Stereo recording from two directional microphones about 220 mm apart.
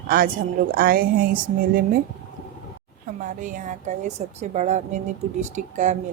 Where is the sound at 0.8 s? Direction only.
40° right (ahead or behind).